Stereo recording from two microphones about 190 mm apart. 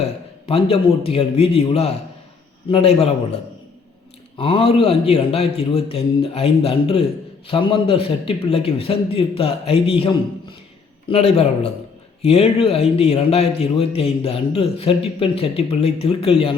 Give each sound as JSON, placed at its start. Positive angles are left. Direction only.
{"t": 0.4, "sound": "a man's voice", "side_deg": 30}
{"t": 11.1, "sound": "a man's voice", "side_deg": 35}